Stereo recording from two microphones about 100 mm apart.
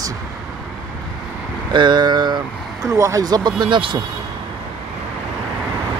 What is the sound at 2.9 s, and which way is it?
Speech, 30° right (ahead or behind).